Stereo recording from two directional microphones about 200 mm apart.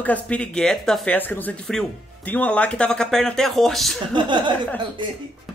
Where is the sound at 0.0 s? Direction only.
5° left (ahead or behind).